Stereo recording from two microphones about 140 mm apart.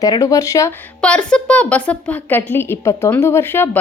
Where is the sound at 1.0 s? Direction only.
10° left (ahead or behind).